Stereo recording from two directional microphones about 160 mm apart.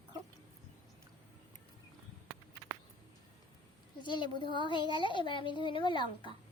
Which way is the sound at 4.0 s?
30° left (ahead or behind).